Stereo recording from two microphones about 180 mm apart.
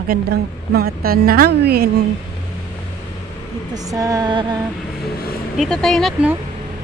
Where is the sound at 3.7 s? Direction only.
20° right (ahead or behind).